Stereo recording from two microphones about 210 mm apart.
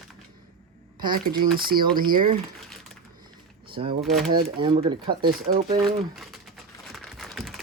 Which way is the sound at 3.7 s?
25° right (ahead or behind).